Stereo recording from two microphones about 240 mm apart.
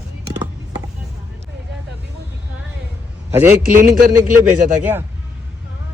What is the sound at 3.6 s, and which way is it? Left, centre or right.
Speech, right.